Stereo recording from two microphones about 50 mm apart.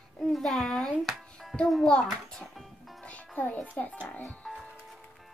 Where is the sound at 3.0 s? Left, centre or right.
Left.